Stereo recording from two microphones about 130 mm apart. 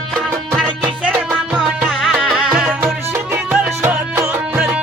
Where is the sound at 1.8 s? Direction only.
Centre (ahead or behind).